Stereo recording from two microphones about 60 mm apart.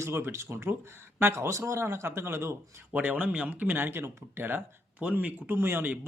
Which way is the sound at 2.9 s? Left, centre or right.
Right.